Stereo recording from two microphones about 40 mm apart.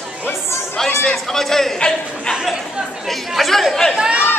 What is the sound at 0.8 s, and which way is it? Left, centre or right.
Speech, centre.